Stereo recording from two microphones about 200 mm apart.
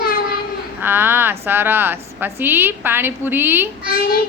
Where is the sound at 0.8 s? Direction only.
10° right (ahead or behind).